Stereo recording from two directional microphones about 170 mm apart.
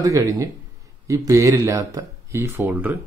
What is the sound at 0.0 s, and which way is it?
Speech, 20° right (ahead or behind).